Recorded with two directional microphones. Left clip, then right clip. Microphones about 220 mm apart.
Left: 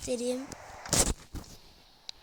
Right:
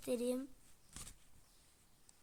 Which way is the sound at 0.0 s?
Centre (ahead or behind).